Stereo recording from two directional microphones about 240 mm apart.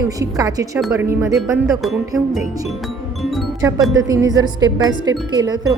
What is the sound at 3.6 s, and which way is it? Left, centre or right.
A woman's voice, centre.